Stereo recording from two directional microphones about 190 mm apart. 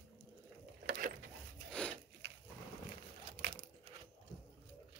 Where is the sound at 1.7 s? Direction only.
5° left (ahead or behind).